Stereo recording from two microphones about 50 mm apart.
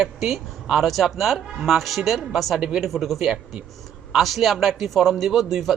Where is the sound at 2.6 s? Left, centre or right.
Centre.